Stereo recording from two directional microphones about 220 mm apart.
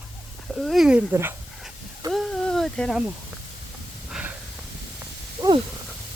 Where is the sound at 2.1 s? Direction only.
Centre (ahead or behind).